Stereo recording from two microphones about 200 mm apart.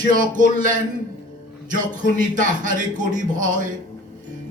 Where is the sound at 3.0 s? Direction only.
40° right (ahead or behind).